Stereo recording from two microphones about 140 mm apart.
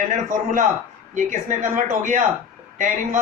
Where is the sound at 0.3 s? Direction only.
65° right (ahead or behind).